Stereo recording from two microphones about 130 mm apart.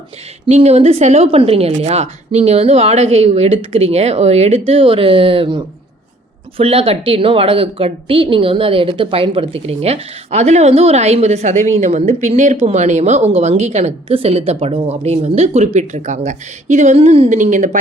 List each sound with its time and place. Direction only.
0.4 s a woman's voice: 55° right (ahead or behind)